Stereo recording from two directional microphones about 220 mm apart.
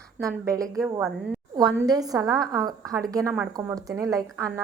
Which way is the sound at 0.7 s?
Centre (ahead or behind).